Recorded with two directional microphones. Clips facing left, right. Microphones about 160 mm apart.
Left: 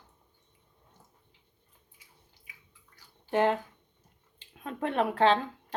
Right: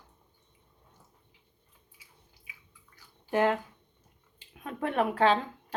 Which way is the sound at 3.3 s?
20° left (ahead or behind).